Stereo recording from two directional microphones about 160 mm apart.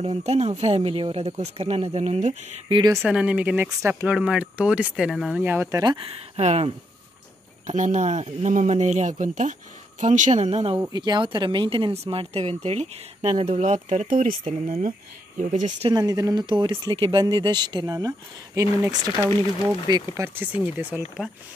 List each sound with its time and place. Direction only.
0.0 s speech: 40° right (ahead or behind)
3.1 s speech: 5° right (ahead or behind)
5.4 s speech: 15° right (ahead or behind)
5.9 s speech: 40° right (ahead or behind)
10.9 s speech: 25° right (ahead or behind); by 15.4 s 55° right (ahead or behind)
15.9 s speech: 25° right (ahead or behind)